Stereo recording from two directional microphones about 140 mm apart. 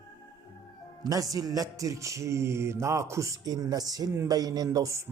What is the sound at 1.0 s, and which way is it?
Music, 25° right (ahead or behind).